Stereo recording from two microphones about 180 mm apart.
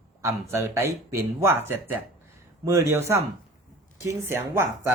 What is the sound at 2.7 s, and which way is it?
Speech, 15° right (ahead or behind).